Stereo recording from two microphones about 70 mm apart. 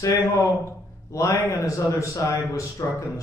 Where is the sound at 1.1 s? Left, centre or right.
Left.